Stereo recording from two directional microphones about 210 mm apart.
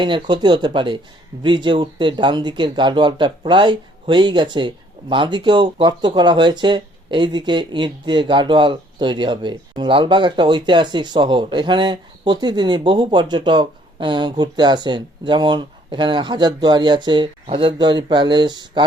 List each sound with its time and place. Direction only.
0.0 s speech: 20° right (ahead or behind)